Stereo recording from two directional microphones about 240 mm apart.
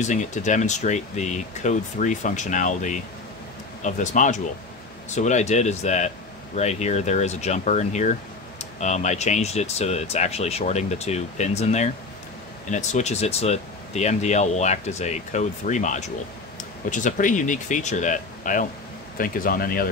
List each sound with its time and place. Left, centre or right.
0.0 s speech: left